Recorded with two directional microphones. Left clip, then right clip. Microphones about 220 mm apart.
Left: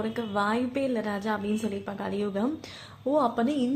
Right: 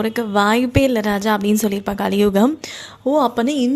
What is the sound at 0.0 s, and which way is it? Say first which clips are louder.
A woman's voice: right 11 dB; 50° right (ahead or behind).